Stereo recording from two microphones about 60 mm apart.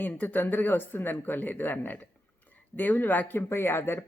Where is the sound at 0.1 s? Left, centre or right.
Left.